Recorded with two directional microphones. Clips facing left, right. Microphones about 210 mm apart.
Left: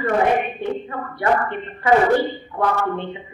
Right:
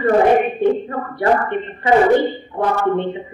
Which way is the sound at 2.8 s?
30° right (ahead or behind).